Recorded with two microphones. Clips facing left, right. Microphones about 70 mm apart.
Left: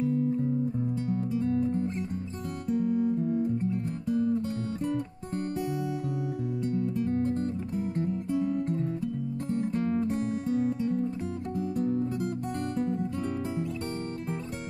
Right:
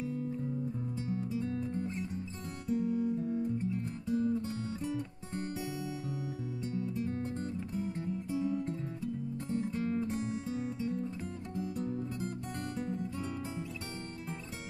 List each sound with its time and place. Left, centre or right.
0.0 s music: left
2.7 s guitar: left
6.6 s music: left